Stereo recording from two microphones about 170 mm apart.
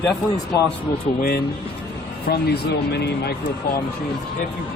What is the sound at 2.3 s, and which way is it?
Speech, 70° left (ahead or behind).